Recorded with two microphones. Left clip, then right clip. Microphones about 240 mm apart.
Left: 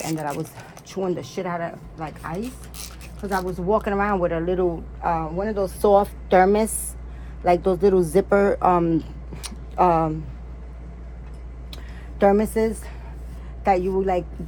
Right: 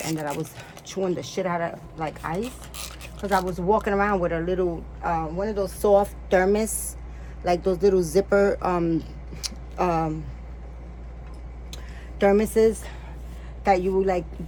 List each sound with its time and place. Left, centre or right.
0.2 s a woman's voice: centre; by 10.2 s left
12.2 s a woman's voice: centre